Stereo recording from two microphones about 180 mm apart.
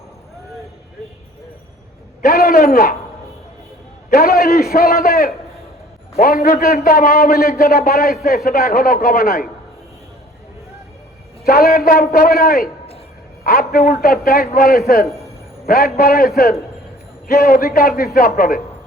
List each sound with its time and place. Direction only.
2.2 s a man's voice: 55° left (ahead or behind)
4.1 s a man's voice: 55° left (ahead or behind)
11.4 s a man's voice: 55° left (ahead or behind)